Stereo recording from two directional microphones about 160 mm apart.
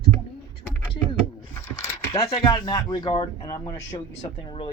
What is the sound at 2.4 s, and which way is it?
Speech, 25° left (ahead or behind).